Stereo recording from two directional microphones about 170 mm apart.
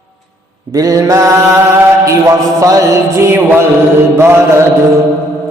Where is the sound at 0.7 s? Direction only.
20° right (ahead or behind).